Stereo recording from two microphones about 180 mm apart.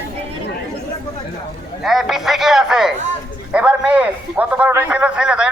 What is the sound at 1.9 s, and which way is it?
A man's voice, centre (ahead or behind).